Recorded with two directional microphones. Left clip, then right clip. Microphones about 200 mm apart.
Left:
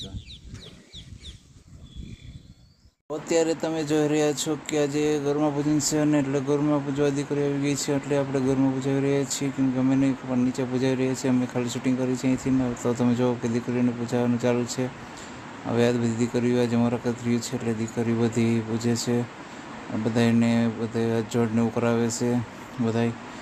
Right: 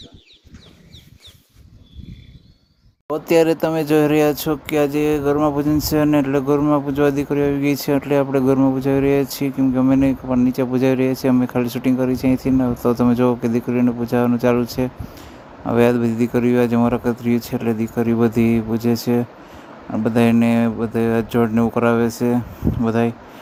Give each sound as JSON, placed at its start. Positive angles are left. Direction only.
{"t": 3.1, "sound": "speech", "side_deg": -40}